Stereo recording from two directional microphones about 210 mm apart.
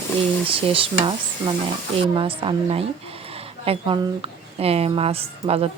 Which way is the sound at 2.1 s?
25° right (ahead or behind).